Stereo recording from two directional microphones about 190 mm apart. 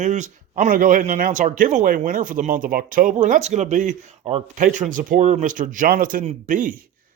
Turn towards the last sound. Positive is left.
turn(degrees=-45)  # may be behind; listen again after turning